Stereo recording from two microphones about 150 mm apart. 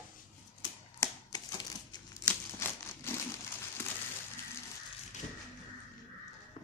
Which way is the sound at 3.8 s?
15° left (ahead or behind).